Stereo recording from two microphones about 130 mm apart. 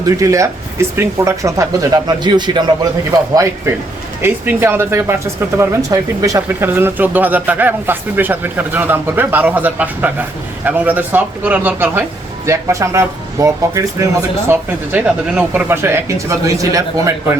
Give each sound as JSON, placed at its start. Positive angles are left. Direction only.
{"t": 0.0, "sound": "speech", "side_deg": -25}